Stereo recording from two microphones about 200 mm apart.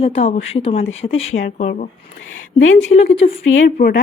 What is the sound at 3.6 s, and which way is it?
Speech, 50° left (ahead or behind).